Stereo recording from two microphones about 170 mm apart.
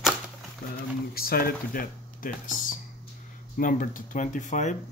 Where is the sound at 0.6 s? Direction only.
55° left (ahead or behind).